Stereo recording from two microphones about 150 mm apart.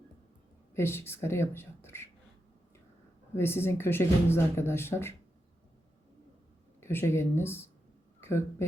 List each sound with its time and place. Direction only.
0.7 s speech: 15° left (ahead or behind)
3.3 s speech: 15° left (ahead or behind)
6.7 s speech: 15° left (ahead or behind)